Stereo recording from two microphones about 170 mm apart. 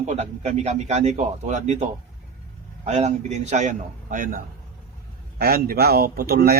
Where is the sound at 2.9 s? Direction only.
40° right (ahead or behind).